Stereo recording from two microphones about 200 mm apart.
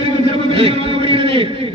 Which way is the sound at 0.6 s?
25° right (ahead or behind).